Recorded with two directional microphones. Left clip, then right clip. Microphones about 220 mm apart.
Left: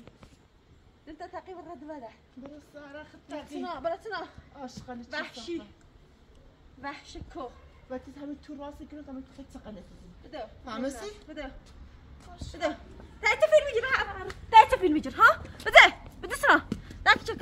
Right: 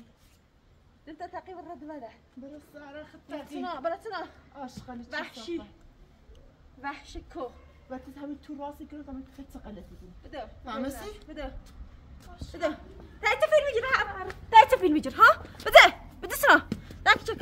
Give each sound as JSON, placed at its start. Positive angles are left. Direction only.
{"t": 1.0, "sound": "a woman's voice", "side_deg": 5}
{"t": 3.6, "sound": "a woman's voice", "side_deg": -5}
{"t": 4.6, "sound": "a woman's voice", "side_deg": 10}
{"t": 5.1, "sound": "a woman's voice", "side_deg": -5}
{"t": 6.8, "sound": "a woman's voice", "side_deg": 0}
{"t": 7.9, "sound": "a woman's voice", "side_deg": 15}
{"t": 10.6, "sound": "a woman's voice", "side_deg": 20}
{"t": 12.4, "sound": "a woman's voice", "side_deg": 40}
{"t": 13.2, "sound": "a sound", "side_deg": 0}
{"t": 14.5, "sound": "a sound", "side_deg": -25}
{"t": 15.7, "sound": "a sound", "side_deg": -40}
{"t": 17.0, "sound": "horse", "side_deg": -20}